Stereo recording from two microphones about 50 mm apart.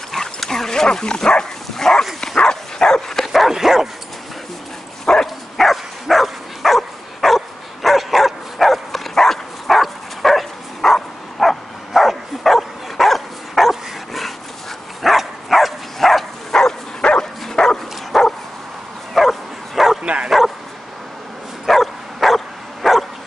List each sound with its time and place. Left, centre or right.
0.1 s dog: centre
3.3 s dog: centre
5.0 s dog: centre
15.0 s a sound: centre
17.0 s dog: centre
19.1 s bow-wow: centre
20.0 s bow-wow: right
20.2 s bow-wow: centre
21.6 s dog: centre